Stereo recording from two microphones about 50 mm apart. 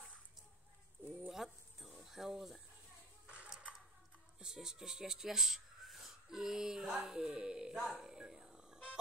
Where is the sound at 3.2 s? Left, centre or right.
Right.